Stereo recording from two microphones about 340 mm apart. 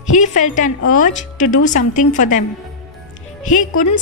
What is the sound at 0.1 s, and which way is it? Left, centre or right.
A woman's voice, left.